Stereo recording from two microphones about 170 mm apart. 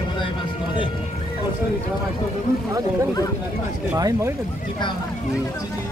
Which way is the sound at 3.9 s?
20° right (ahead or behind).